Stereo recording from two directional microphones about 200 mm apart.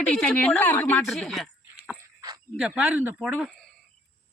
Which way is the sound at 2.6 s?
5° right (ahead or behind).